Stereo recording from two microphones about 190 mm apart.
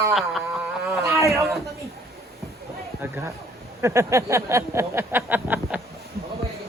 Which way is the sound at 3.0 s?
10° right (ahead or behind).